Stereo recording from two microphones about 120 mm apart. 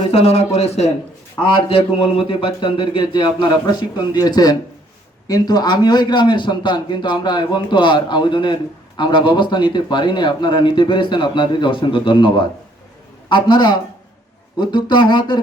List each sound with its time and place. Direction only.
0.1 s a man's voice: 60° left (ahead or behind); by 15.4 s 40° left (ahead or behind)